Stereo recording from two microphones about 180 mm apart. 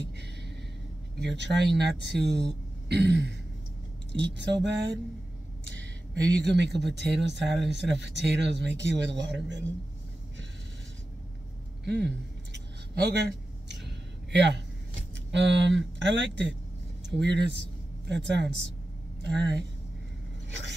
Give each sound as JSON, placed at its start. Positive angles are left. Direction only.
{"t": 0.0, "sound": "a sound", "side_deg": -70}
{"t": 1.2, "sound": "speech", "side_deg": -70}
{"t": 6.4, "sound": "speech", "side_deg": -75}
{"t": 11.8, "sound": "speech", "side_deg": -70}
{"t": 12.5, "sound": "a sound", "side_deg": -70}
{"t": 15.3, "sound": "speech", "side_deg": -80}
{"t": 20.4, "sound": "scrape", "side_deg": -80}